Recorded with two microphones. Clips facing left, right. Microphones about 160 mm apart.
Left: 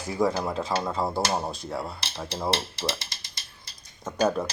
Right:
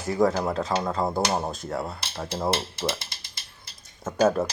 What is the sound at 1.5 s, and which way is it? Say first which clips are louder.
A man's voice: right 2 dB; centre (ahead or behind).